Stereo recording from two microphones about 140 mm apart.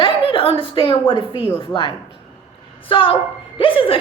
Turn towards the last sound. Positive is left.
turn(degrees=40)  # may be behind; listen again after turning